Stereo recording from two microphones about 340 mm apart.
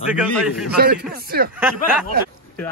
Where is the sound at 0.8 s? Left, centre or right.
Right.